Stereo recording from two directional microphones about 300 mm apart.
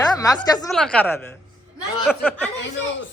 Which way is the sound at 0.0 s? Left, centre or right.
Centre.